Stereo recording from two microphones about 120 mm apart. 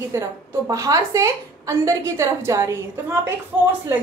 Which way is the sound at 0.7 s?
30° right (ahead or behind).